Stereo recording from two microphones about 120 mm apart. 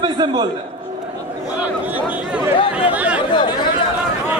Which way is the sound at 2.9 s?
10° right (ahead or behind).